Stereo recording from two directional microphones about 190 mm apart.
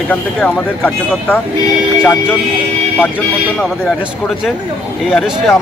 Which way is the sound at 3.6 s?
Centre (ahead or behind).